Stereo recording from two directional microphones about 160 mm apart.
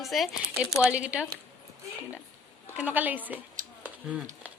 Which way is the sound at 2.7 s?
10° right (ahead or behind).